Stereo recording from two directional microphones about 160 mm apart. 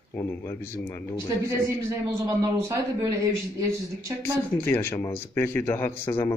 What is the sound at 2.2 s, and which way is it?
Speech, 20° right (ahead or behind).